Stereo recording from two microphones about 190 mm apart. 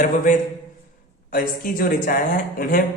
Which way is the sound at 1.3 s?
45° left (ahead or behind).